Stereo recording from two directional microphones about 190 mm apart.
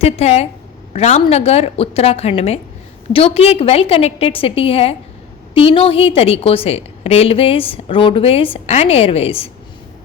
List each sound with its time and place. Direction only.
0.0 s a woman's voice: 35° left (ahead or behind)